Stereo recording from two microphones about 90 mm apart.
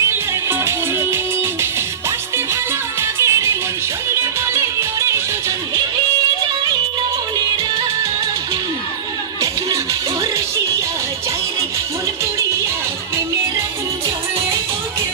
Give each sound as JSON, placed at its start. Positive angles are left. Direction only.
{"t": 0.1, "sound": "music", "side_deg": -25}